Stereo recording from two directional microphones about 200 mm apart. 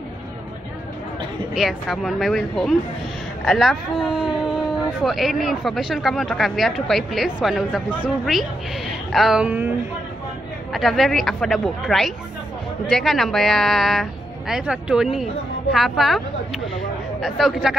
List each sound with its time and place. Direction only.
1.5 s speech: centre (ahead or behind)
10.7 s speech: centre (ahead or behind)